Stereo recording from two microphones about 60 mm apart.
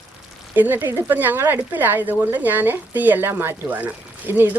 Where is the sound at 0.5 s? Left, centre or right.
Right.